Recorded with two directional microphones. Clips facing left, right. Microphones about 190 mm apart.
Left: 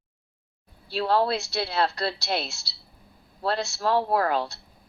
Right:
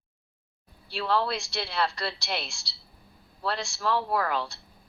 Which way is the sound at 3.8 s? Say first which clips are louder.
Left 4 dB; 40° left (ahead or behind).